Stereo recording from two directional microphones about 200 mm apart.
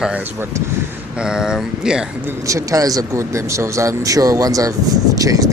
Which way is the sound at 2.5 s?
15° right (ahead or behind).